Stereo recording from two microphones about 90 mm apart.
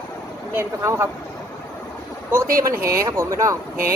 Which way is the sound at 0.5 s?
30° right (ahead or behind).